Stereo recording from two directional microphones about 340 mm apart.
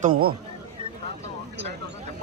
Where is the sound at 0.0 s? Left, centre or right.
Right.